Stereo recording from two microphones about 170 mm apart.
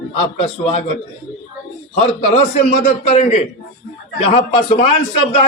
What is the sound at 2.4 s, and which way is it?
A man's voice, 50° left (ahead or behind).